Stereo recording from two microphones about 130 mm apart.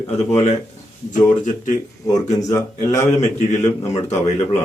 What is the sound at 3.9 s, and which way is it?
Speech, 60° left (ahead or behind).